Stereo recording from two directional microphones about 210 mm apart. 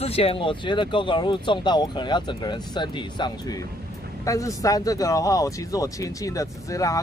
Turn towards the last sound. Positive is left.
turn(degrees=15)  # may be behind; listen again after turning